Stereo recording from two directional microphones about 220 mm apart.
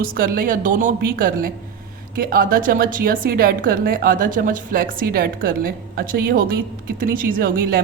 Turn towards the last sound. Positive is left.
turn(degrees=-45)  # may be behind; listen again after turning